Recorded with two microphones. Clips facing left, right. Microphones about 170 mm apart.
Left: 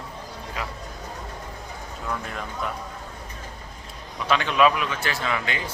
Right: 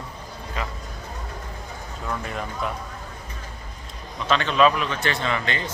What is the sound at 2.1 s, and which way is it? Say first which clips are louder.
Speech: right 2 dB; centre (ahead or behind).